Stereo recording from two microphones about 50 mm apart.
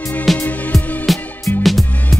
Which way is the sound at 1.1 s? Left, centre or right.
Centre.